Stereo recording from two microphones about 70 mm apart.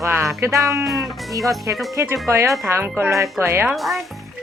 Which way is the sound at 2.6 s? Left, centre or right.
Right.